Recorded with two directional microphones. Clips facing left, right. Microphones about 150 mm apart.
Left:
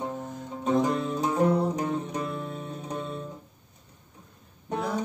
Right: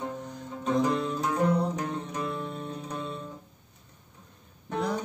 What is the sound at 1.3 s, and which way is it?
Music, 20° left (ahead or behind).